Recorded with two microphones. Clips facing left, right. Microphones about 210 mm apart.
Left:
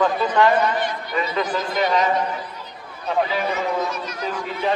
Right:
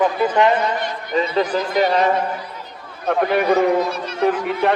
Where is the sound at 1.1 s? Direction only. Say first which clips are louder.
Right 6 dB; 30° right (ahead or behind).